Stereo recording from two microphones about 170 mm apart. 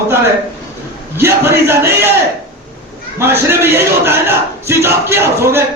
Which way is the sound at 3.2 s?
15° right (ahead or behind).